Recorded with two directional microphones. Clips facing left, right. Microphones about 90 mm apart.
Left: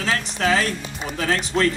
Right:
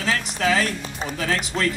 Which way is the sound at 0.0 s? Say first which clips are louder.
Even; 35° left (ahead or behind).